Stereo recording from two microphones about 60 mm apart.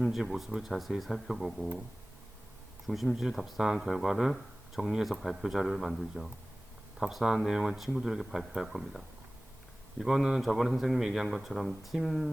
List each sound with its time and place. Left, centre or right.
0.2 s speech: centre
2.8 s speech: centre